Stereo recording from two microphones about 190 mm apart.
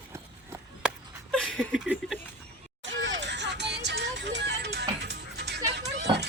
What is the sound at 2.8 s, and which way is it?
Music, 70° right (ahead or behind).